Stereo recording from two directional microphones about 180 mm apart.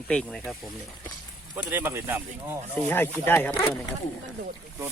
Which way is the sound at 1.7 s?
15° right (ahead or behind).